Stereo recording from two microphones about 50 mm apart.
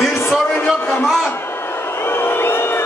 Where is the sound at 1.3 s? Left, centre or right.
Left.